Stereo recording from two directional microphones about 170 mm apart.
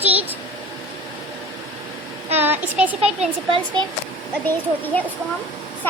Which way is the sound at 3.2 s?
30° right (ahead or behind).